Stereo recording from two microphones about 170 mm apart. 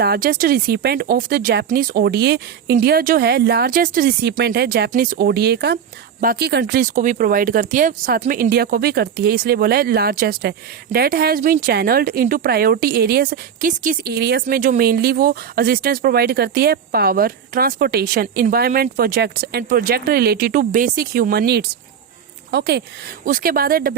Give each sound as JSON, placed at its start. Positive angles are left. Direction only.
{"t": 0.0, "sound": "speech", "side_deg": -65}
{"t": 2.8, "sound": "speech", "side_deg": -60}
{"t": 4.9, "sound": "speech", "side_deg": -55}
{"t": 14.5, "sound": "speech", "side_deg": -60}
{"t": 23.2, "sound": "speech", "side_deg": -55}